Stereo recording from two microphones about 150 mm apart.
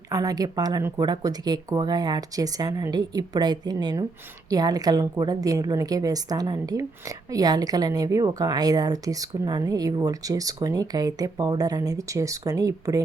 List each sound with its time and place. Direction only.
0.1 s a woman's voice: 25° right (ahead or behind)